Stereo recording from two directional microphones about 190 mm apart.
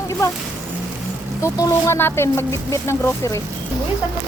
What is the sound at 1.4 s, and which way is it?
Speech, 15° left (ahead or behind).